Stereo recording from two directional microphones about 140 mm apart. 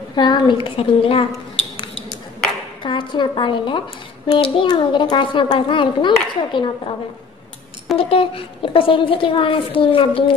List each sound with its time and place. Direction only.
0.1 s a woman's voice: 35° left (ahead or behind)
2.8 s a woman's voice: 35° left (ahead or behind)
8.0 s a woman's voice: 40° left (ahead or behind)